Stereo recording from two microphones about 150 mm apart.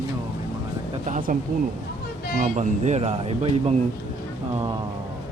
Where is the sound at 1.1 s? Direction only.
70° right (ahead or behind).